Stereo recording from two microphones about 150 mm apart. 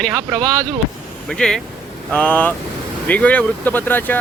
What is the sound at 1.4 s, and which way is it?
Speech, 5° left (ahead or behind).